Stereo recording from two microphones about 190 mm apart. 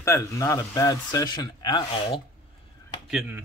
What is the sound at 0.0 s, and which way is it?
Speech, 15° left (ahead or behind).